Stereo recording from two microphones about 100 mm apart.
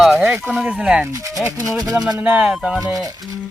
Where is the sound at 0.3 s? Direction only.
15° right (ahead or behind).